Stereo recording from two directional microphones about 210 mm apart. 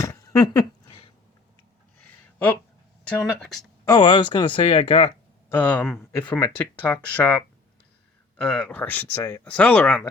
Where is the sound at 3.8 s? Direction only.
20° left (ahead or behind).